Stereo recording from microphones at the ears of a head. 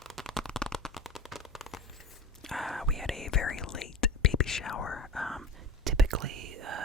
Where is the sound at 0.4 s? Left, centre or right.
Centre.